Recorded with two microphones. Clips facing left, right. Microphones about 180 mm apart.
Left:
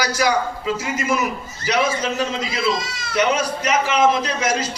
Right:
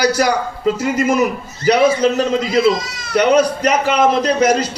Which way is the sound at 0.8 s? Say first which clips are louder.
Right 7 dB; 55° right (ahead or behind).